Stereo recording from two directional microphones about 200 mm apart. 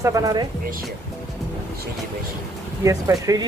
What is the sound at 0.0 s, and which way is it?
Speech, 15° right (ahead or behind).